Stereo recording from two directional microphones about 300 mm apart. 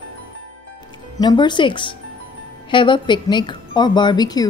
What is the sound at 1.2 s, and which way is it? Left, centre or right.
Speech, centre.